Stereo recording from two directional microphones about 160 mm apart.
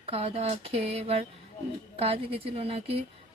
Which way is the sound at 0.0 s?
40° right (ahead or behind).